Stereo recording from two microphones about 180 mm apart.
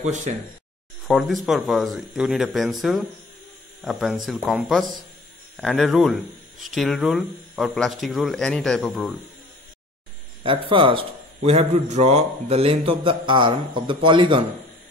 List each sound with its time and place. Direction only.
0.0 s speech: 40° right (ahead or behind)
1.0 s speech: centre (ahead or behind)
10.4 s a man's voice: 30° right (ahead or behind)